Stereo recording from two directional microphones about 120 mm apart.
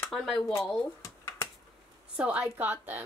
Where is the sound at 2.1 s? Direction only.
10° right (ahead or behind).